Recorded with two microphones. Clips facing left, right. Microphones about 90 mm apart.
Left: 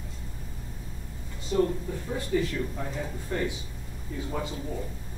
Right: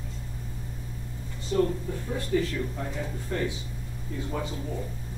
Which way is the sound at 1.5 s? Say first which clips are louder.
Even; 15° left (ahead or behind).